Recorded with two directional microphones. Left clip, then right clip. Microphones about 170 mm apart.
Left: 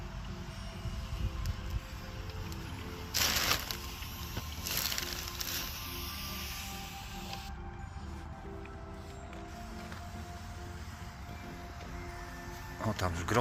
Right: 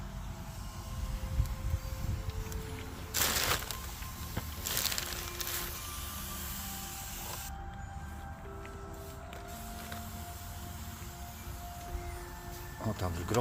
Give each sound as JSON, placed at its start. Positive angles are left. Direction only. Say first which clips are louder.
{"t": 3.1, "sound": "crushing", "louder": "left 1 dB", "side_deg": -45}
{"t": 4.8, "sound": "music", "louder": "right 1 dB", "side_deg": -45}
{"t": 12.8, "sound": "speech", "louder": "left 3 dB", "side_deg": 0}